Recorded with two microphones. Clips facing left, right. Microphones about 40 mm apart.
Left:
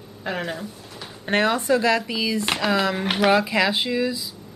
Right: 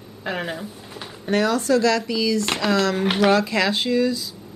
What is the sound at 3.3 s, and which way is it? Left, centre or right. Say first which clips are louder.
Speech: even; centre.